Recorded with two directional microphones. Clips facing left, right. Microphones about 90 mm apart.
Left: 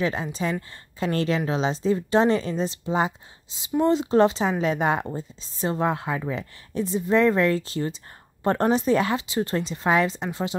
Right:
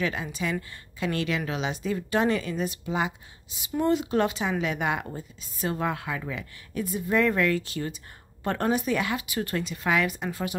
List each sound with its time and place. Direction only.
0.0 s a woman's voice: 30° left (ahead or behind)